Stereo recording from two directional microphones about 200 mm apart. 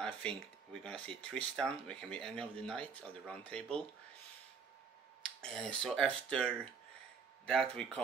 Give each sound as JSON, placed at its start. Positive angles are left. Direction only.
{"t": 0.0, "sound": "speech", "side_deg": 5}
{"t": 5.2, "sound": "speech", "side_deg": 0}